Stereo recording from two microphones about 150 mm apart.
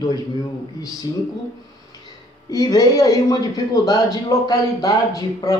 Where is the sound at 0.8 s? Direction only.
25° left (ahead or behind).